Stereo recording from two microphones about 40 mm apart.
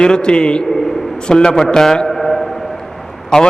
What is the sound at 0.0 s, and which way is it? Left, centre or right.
A man's voice, left.